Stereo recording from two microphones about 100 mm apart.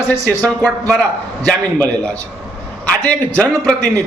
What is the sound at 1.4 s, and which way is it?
Speech, 20° left (ahead or behind).